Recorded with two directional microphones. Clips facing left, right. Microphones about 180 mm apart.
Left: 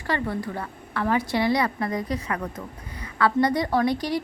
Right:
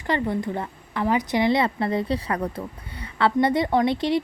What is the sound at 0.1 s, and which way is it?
A woman's voice, 20° right (ahead or behind).